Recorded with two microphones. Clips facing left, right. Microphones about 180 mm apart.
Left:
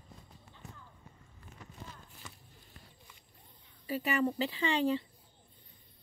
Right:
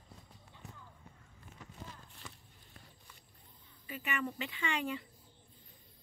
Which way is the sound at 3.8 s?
35° left (ahead or behind).